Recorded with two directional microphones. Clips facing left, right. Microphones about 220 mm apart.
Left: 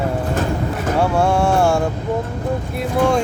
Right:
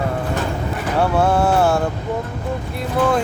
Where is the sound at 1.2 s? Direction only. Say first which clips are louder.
Right 1 dB; 5° right (ahead or behind).